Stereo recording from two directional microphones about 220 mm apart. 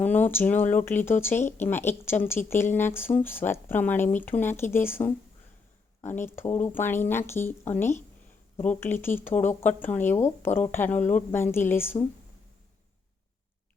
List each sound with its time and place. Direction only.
0.0 s speech: 10° left (ahead or behind)
9.3 s speech: 35° left (ahead or behind)
9.6 s speech: 10° left (ahead or behind)